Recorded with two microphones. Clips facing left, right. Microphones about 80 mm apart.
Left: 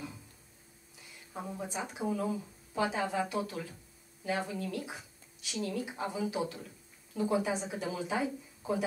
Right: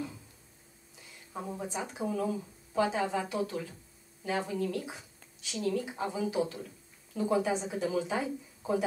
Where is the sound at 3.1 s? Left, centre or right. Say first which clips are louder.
Even; right.